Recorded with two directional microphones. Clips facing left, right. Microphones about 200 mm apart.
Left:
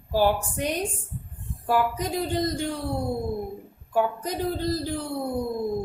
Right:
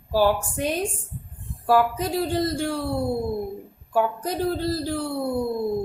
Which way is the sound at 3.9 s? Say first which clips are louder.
Right 2 dB; 15° left (ahead or behind).